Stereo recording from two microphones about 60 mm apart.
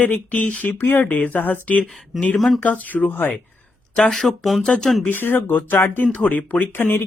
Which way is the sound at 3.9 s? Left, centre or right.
Centre.